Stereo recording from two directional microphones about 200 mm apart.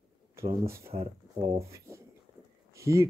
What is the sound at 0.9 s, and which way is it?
Speech, 25° right (ahead or behind).